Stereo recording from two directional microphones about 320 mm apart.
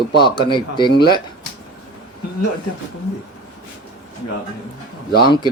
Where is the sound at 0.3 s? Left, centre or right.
Centre.